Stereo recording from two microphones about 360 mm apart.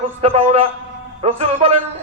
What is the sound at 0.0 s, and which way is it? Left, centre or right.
A man's voice, centre.